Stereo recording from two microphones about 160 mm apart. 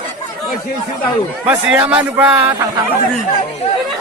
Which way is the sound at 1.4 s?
10° right (ahead or behind).